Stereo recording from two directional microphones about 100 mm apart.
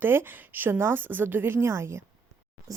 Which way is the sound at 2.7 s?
35° right (ahead or behind).